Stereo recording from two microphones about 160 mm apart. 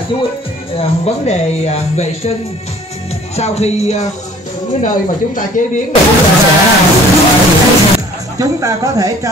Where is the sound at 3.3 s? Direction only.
40° left (ahead or behind).